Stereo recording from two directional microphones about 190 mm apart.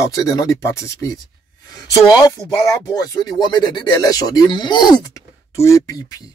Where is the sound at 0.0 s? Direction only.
15° left (ahead or behind).